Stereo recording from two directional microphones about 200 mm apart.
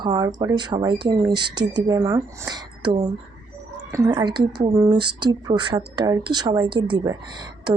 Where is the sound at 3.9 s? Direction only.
20° right (ahead or behind).